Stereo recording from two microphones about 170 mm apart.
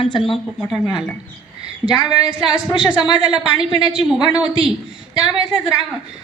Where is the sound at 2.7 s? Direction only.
25° left (ahead or behind).